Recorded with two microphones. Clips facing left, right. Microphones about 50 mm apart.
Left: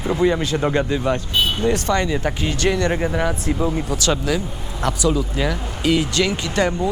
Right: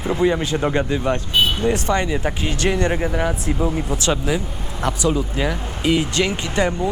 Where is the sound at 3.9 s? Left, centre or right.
Right.